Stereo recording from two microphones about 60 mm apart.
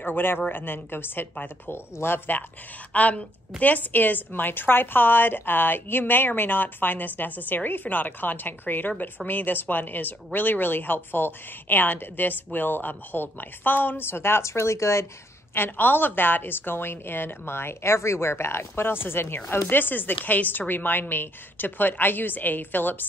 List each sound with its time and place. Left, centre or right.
0.0 s a woman's voice: left
2.9 s a woman's voice: left
15.5 s a woman's voice: left